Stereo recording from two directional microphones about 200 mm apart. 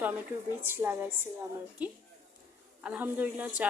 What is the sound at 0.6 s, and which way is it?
Speech, 10° right (ahead or behind).